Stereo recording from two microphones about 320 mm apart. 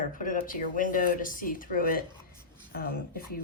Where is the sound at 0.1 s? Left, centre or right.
Left.